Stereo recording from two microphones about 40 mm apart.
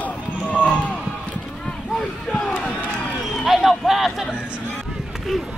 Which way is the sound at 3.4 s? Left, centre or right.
Centre.